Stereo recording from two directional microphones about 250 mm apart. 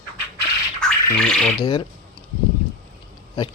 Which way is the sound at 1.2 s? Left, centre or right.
Centre.